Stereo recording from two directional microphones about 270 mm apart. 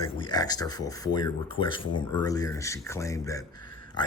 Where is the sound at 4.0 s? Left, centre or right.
Centre.